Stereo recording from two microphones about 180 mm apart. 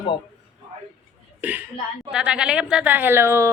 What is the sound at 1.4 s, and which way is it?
Speech, 10° right (ahead or behind).